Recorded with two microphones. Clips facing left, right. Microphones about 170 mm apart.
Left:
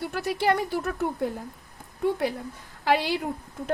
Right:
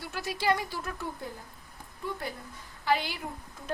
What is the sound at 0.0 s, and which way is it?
A woman's voice, 60° left (ahead or behind).